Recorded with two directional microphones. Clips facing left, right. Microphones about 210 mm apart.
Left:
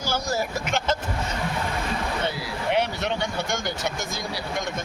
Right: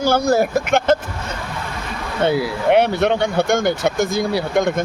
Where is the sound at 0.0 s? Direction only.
55° right (ahead or behind).